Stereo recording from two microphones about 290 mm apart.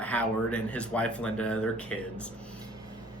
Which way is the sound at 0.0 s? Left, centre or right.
Centre.